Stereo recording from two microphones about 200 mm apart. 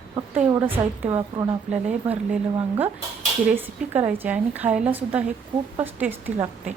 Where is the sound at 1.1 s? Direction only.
25° right (ahead or behind).